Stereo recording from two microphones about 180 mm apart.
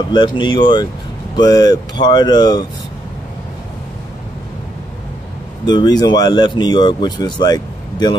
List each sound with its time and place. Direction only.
0.0 s speech: 25° left (ahead or behind)
5.7 s speech: 25° left (ahead or behind)